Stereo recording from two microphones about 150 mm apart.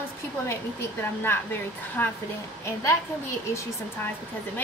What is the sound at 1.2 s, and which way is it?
Speech, 15° left (ahead or behind).